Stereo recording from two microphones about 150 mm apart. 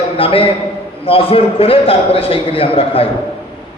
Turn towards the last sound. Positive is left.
turn(degrees=40)  # may be behind; listen again after turning